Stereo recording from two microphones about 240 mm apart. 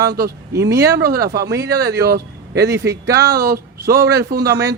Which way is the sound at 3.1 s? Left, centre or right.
Centre.